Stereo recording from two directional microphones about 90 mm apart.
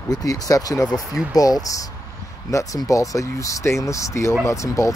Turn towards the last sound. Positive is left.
turn(degrees=35)  # may be behind; listen again after turning